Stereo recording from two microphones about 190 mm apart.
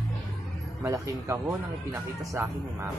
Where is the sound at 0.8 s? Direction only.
15° right (ahead or behind).